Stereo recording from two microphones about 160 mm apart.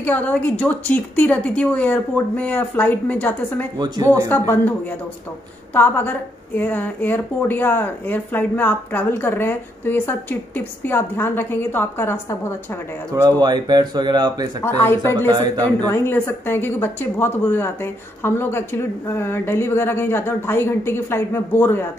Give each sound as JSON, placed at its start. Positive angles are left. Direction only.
{"t": 0.0, "sound": "a woman's voice", "side_deg": 10}
{"t": 3.7, "sound": "speech", "side_deg": -25}
{"t": 4.3, "sound": "a woman's voice", "side_deg": 10}
{"t": 13.1, "sound": "speech", "side_deg": -25}
{"t": 14.6, "sound": "a woman's voice", "side_deg": 15}